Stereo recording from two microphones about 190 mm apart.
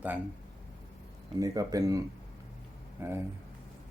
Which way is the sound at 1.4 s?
20° right (ahead or behind).